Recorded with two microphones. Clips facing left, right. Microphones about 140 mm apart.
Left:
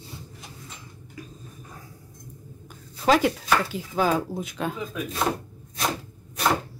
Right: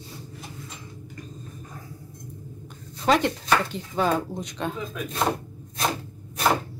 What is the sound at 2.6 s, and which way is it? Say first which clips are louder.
Speech: left 1 dB; 5° left (ahead or behind).